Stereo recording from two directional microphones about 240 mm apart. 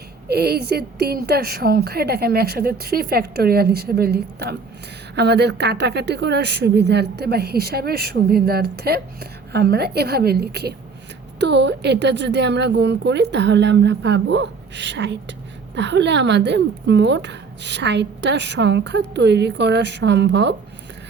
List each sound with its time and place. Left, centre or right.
0.3 s a woman's voice: right